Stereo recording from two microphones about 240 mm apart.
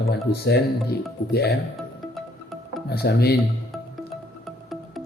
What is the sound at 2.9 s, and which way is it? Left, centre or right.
Speech, left.